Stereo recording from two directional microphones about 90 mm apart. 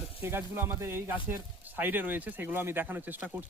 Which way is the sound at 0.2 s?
25° right (ahead or behind).